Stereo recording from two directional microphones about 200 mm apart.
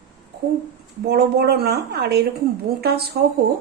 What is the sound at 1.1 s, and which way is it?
A woman's voice, 55° right (ahead or behind).